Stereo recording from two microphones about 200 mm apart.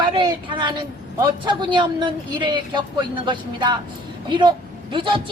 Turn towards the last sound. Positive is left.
turn(degrees=-25)  # may be behind; listen again after turning